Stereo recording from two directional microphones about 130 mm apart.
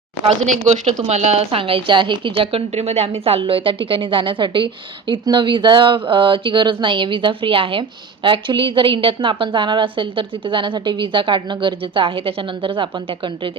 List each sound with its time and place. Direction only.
0.3 s a woman's voice: 65° right (ahead or behind); by 13.5 s 40° right (ahead or behind)